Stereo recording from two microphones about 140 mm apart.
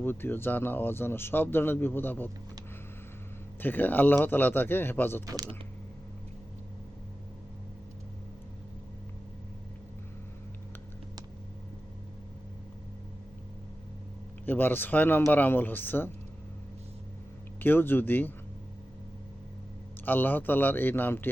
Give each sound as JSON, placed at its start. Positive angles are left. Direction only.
{"t": 0.0, "sound": "speech", "side_deg": 15}
{"t": 3.6, "sound": "speech", "side_deg": 15}
{"t": 5.2, "sound": "speech", "side_deg": -25}
{"t": 14.4, "sound": "speech", "side_deg": 15}
{"t": 17.6, "sound": "speech", "side_deg": 15}
{"t": 20.1, "sound": "speech", "side_deg": 15}